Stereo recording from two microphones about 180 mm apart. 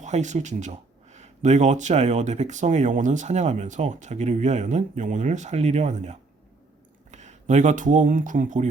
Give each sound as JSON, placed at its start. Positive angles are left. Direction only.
{"t": 0.0, "sound": "speech", "side_deg": -40}